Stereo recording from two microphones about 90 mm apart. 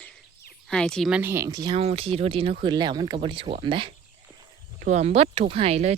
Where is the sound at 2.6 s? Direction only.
55° right (ahead or behind); by 3.9 s 75° right (ahead or behind).